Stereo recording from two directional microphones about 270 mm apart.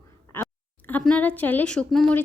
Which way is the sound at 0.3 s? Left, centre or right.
Centre.